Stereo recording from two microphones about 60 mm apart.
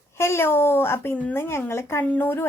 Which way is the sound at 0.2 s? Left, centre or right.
Left.